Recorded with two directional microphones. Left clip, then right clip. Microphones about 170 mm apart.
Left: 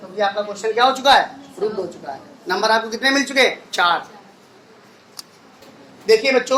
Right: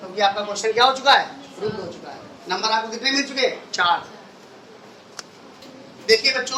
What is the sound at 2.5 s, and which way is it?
Speech, 45° left (ahead or behind).